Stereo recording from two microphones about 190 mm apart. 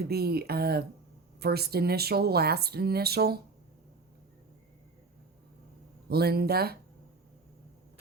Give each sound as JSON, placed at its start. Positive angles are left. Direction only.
{"t": 0.0, "sound": "speech", "side_deg": -55}
{"t": 6.1, "sound": "speech", "side_deg": -55}